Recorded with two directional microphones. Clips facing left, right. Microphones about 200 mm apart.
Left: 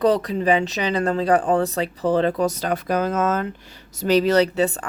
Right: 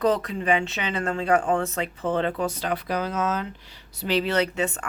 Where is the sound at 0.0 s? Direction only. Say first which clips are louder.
Left 4 dB; 35° left (ahead or behind).